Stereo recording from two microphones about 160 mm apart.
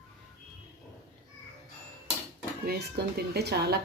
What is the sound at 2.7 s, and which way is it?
A woman's voice, 90° right.